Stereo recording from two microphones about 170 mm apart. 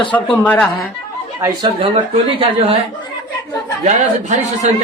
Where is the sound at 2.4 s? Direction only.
35° right (ahead or behind).